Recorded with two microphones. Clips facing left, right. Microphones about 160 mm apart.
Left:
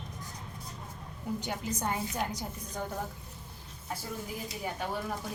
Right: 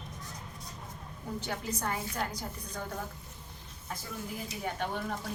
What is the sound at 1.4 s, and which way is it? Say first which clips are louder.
Speech: right 2 dB; 20° left (ahead or behind).